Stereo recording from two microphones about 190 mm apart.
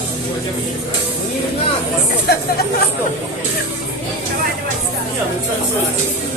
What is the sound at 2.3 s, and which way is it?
Chatter, 55° left (ahead or behind).